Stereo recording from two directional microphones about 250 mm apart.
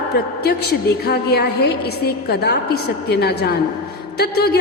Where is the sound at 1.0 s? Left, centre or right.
Left.